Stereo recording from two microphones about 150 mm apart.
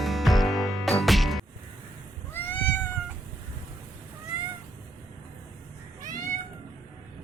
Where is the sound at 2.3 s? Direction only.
15° left (ahead or behind).